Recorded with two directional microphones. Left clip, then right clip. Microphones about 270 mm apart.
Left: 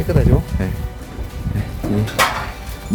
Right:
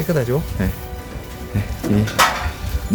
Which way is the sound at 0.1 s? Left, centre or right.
Centre.